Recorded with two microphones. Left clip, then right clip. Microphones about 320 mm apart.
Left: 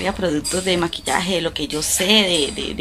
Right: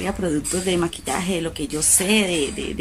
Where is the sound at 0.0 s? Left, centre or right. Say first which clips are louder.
Left 3 dB; centre.